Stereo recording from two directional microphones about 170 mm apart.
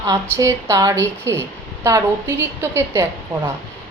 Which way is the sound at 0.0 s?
20° right (ahead or behind).